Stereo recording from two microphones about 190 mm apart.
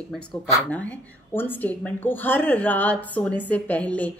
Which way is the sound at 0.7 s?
10° left (ahead or behind).